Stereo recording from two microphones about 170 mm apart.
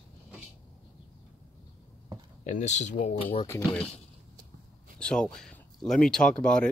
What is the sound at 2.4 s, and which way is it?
Speech, 45° left (ahead or behind).